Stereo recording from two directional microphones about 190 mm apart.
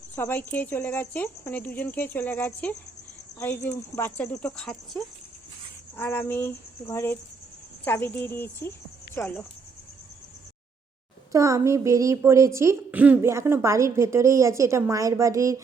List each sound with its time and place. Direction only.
0.2 s speech: 10° left (ahead or behind)
11.3 s a woman's voice: 15° right (ahead or behind)